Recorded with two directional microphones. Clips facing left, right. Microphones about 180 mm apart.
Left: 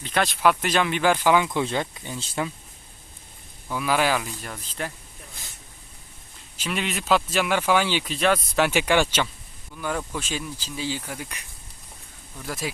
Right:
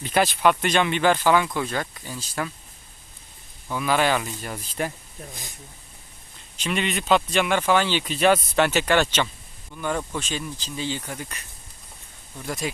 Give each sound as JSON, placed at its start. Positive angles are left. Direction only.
{"t": 0.0, "sound": "speech", "side_deg": -5}
{"t": 3.7, "sound": "speech", "side_deg": 5}
{"t": 4.5, "sound": "speech", "side_deg": -10}
{"t": 6.6, "sound": "speech", "side_deg": 0}
{"t": 8.1, "sound": "speech", "side_deg": 0}
{"t": 8.6, "sound": "speech", "side_deg": 10}